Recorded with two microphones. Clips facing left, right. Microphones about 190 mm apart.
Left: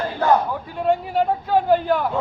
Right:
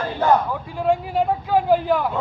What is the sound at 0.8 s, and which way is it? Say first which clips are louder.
A man's voice: even; centre (ahead or behind).